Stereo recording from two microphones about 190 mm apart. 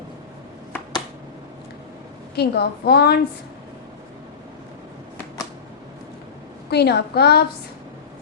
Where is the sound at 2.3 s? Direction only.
60° left (ahead or behind).